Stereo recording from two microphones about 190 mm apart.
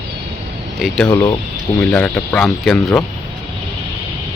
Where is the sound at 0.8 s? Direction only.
5° right (ahead or behind).